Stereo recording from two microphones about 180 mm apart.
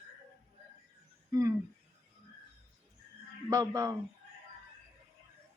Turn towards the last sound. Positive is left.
turn(degrees=-15)  # may be behind; listen again after turning